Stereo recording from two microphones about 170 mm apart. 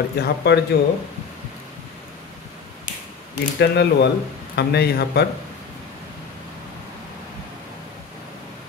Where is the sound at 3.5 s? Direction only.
90° left.